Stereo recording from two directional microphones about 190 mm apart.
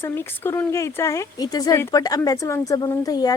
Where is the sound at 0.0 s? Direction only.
10° left (ahead or behind).